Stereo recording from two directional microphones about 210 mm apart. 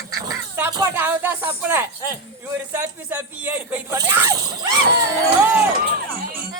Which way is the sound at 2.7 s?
10° right (ahead or behind).